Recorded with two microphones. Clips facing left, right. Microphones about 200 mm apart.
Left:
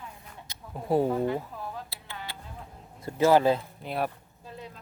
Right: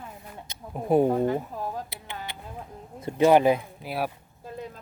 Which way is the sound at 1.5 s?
45° right (ahead or behind).